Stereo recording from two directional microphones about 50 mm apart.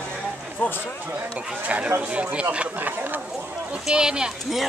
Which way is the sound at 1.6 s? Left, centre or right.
Right.